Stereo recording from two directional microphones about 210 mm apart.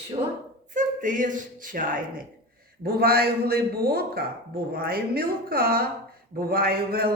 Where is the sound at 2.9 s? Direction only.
50° right (ahead or behind).